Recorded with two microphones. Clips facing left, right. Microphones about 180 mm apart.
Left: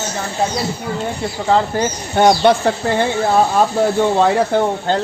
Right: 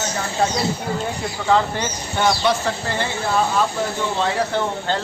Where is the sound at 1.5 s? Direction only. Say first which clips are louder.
Left 3 dB; 35° left (ahead or behind).